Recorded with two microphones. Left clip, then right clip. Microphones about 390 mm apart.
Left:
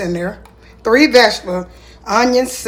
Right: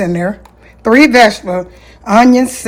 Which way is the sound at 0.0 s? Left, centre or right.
Centre.